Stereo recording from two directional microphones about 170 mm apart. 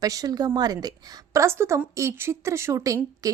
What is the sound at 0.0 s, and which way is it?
A woman's voice, 20° right (ahead or behind).